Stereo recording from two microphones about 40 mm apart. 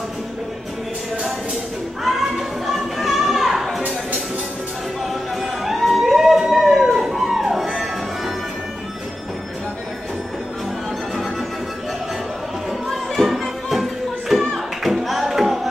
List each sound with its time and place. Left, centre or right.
2.0 s music: centre
5.4 s a sound: centre
13.2 s music: centre